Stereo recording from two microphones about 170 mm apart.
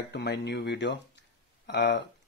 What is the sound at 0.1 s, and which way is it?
Speech, 80° left.